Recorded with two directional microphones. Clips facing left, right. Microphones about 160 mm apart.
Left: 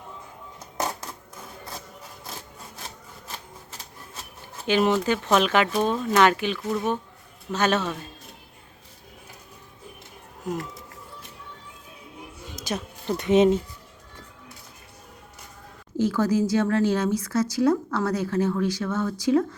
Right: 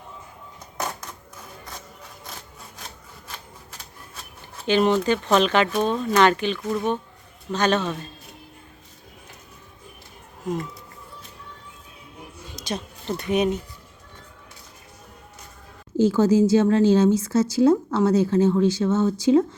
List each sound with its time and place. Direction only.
4.6 s speech: 5° left (ahead or behind)
12.5 s a sound: 5° left (ahead or behind)
13.1 s speech: 20° left (ahead or behind)
16.0 s a woman's voice: 25° right (ahead or behind)